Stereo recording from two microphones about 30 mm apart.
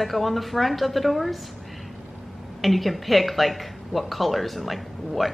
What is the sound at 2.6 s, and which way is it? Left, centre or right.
A woman's voice, centre.